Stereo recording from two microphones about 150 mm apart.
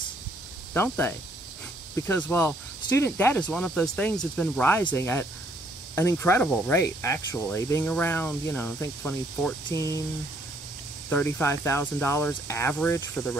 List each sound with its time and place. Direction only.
0.7 s speech: 15° left (ahead or behind)
9.8 s speech: 20° left (ahead or behind)
11.1 s speech: 10° left (ahead or behind)
13.1 s speech: 5° left (ahead or behind)